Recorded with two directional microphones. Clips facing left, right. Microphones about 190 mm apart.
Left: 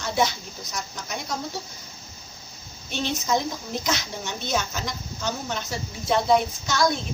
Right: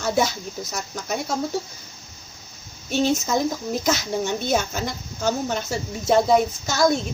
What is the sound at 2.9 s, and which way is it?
A woman's voice, 45° right (ahead or behind).